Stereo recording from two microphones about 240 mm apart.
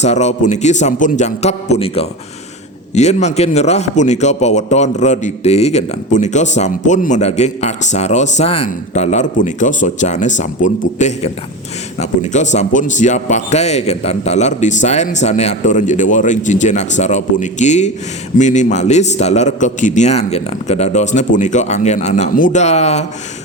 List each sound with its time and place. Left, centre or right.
0.0 s a man's voice: left